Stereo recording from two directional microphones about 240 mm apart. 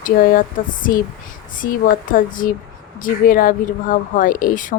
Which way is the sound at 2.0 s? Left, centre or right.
Left.